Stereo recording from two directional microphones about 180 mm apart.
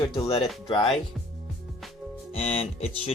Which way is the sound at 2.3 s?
35° left (ahead or behind).